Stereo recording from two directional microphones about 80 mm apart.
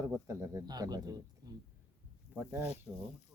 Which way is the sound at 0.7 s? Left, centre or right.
Right.